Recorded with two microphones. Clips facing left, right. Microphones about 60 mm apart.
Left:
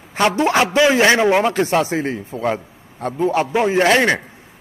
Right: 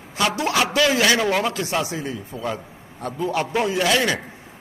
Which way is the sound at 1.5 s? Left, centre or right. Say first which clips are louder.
Left 7 dB; left.